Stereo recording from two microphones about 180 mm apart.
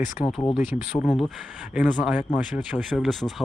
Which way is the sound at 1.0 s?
5° left (ahead or behind).